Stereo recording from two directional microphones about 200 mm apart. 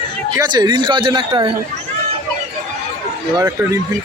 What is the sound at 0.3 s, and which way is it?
Speech, 20° right (ahead or behind).